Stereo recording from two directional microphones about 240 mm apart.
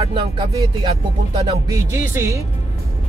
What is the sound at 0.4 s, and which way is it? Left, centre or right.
Speech, right.